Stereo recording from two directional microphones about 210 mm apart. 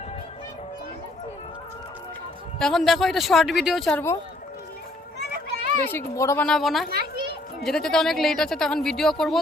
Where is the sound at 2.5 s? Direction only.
Centre (ahead or behind).